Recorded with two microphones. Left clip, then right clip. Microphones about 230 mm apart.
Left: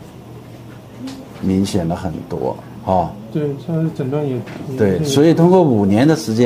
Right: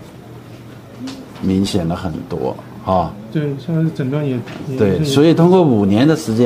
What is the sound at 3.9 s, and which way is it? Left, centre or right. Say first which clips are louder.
Speech: even; right.